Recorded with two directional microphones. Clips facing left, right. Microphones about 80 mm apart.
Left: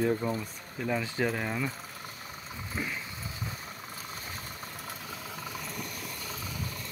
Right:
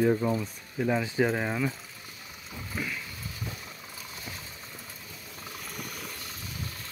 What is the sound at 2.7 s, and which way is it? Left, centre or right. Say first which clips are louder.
Vehicle: right 1 dB; left.